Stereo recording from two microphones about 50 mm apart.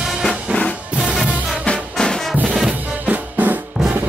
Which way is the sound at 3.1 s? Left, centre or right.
Right.